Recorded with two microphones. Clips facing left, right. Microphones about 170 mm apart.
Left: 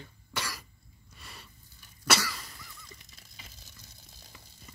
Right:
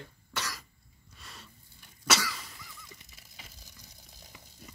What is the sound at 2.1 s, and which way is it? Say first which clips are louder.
Cough: left 1 dB; 5° left (ahead or behind).